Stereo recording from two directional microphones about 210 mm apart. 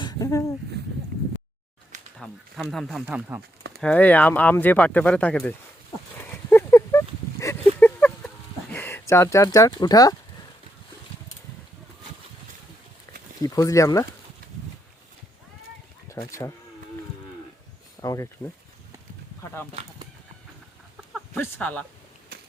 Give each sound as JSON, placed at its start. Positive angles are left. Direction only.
{"t": 0.0, "sound": "a sound", "side_deg": 15}
{"t": 2.1, "sound": "speech", "side_deg": 0}
{"t": 3.8, "sound": "speech", "side_deg": 5}
{"t": 6.3, "sound": "a sound", "side_deg": 10}
{"t": 8.7, "sound": "speech", "side_deg": 10}
{"t": 13.4, "sound": "speech", "side_deg": 15}
{"t": 16.0, "sound": "speech", "side_deg": 15}
{"t": 18.0, "sound": "speech", "side_deg": 15}
{"t": 21.3, "sound": "speech", "side_deg": 10}